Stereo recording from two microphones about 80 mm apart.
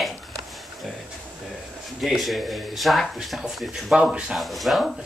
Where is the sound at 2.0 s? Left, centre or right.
Centre.